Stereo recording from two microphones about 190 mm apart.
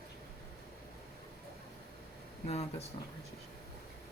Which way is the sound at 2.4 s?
35° left (ahead or behind).